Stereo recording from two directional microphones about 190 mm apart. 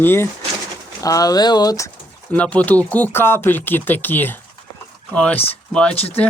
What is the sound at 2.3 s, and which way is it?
Speech, 5° left (ahead or behind).